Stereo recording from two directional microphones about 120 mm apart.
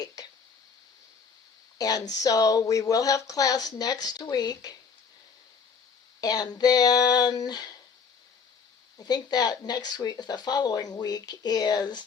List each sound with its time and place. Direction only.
1.8 s speech: 30° left (ahead or behind)
6.1 s speech: 35° left (ahead or behind)
9.0 s speech: 35° left (ahead or behind)